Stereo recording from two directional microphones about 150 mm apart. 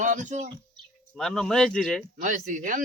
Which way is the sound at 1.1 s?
5° left (ahead or behind).